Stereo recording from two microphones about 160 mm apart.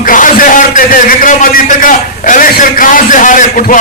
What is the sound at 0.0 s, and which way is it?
A man's voice, 60° left (ahead or behind).